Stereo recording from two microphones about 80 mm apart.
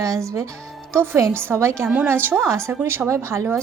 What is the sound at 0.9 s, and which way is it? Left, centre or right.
A woman's voice, right.